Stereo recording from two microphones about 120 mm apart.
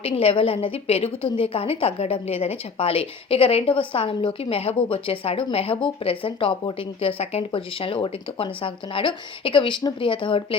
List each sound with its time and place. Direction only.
0.0 s a woman's voice: 50° left (ahead or behind)